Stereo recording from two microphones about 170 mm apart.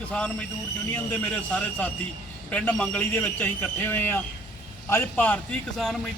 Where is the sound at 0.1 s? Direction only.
5° left (ahead or behind).